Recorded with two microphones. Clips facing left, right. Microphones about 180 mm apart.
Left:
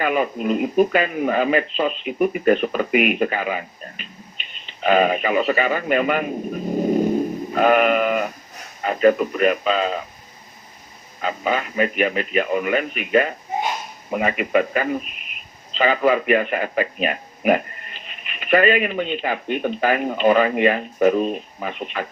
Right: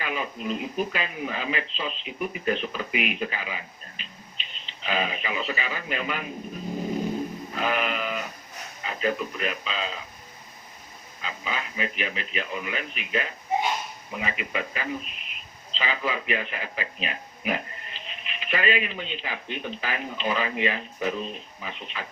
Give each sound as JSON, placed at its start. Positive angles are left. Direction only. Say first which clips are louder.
{"t": 0.0, "sound": "speech", "louder": "left 10 dB", "side_deg": 55}
{"t": 7.5, "sound": "sheep", "louder": "left 12 dB", "side_deg": 55}
{"t": 8.8, "sound": "speech", "louder": "left 11 dB", "side_deg": 55}
{"t": 11.2, "sound": "speech", "louder": "left 11 dB", "side_deg": 55}